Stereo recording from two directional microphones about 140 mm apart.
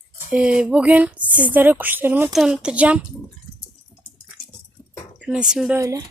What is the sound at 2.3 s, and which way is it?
Speech, 5° right (ahead or behind).